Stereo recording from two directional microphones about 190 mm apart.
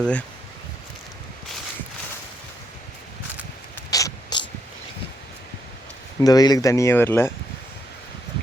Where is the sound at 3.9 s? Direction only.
20° left (ahead or behind).